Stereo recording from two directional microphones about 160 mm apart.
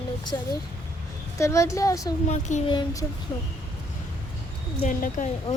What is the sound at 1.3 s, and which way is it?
Speech, 20° left (ahead or behind).